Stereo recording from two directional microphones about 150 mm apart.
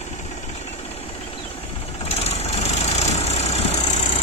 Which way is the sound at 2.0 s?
45° left (ahead or behind).